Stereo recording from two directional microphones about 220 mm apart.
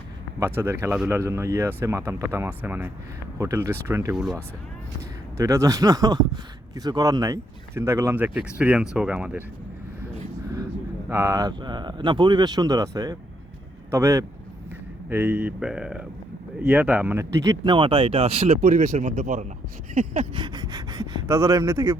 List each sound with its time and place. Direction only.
0.3 s speech: 10° right (ahead or behind)
5.4 s speech: 15° right (ahead or behind)
11.1 s speech: 15° right (ahead or behind)